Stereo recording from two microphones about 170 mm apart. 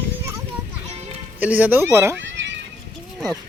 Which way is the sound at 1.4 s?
10° right (ahead or behind).